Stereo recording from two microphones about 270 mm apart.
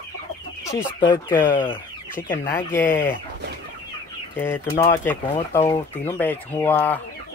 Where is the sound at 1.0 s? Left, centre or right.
Centre.